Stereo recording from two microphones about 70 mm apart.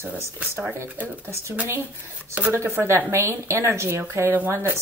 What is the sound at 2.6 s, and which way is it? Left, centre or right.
A woman's voice, right.